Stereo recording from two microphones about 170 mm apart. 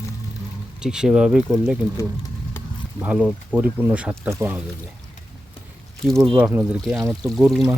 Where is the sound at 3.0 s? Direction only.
10° right (ahead or behind).